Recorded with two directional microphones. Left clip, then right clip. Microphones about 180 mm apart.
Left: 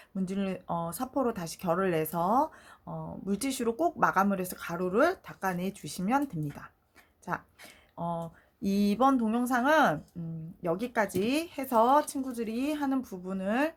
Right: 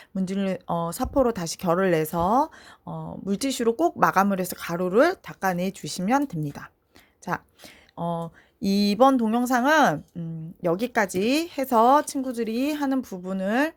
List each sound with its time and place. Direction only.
0.1 s speech: 40° right (ahead or behind)